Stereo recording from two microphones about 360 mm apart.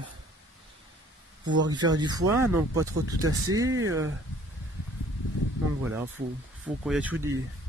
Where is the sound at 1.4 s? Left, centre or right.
Right.